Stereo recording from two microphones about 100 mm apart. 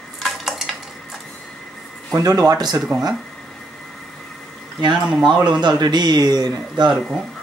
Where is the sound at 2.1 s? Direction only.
40° right (ahead or behind).